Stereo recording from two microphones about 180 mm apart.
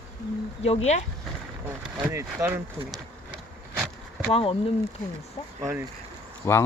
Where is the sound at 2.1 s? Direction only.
15° right (ahead or behind).